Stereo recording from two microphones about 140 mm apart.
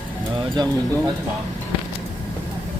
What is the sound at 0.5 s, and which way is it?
Speech, 30° right (ahead or behind).